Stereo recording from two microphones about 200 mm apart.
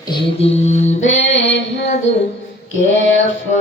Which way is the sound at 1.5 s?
60° left (ahead or behind).